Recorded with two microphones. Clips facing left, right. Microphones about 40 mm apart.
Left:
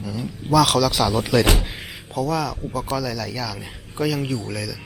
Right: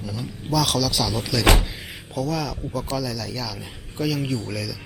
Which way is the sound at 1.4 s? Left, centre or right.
Right.